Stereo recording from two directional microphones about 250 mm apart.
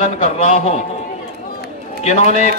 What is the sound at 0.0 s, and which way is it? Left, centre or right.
Speech, left.